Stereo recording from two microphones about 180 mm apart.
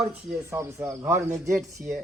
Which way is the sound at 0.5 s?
15° right (ahead or behind).